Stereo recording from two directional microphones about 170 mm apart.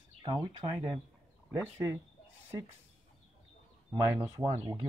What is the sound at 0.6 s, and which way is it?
Speech, 25° right (ahead or behind).